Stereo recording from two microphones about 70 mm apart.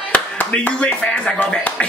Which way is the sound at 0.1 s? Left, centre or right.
Centre.